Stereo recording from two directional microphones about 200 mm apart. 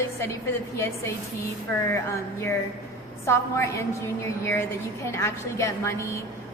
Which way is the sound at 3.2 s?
15° left (ahead or behind).